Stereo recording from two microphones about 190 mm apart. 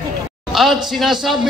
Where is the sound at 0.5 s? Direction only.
Centre (ahead or behind).